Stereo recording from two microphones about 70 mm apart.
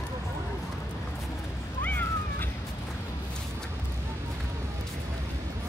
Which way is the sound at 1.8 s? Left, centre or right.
Left.